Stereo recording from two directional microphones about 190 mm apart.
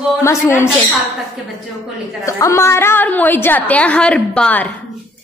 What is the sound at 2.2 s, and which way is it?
A woman's voice, 15° left (ahead or behind).